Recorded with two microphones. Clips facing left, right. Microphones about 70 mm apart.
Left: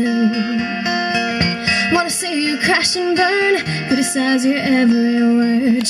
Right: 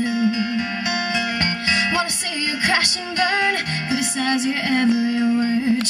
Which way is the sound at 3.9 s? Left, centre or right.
Left.